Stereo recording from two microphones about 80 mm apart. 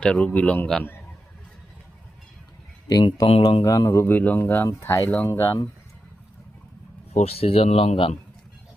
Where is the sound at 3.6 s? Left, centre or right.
Left.